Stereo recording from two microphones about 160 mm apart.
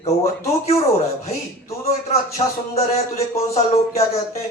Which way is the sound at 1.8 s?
40° left (ahead or behind).